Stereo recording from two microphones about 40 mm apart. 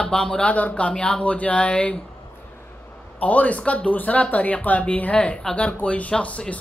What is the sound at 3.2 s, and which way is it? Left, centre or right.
Speech, left.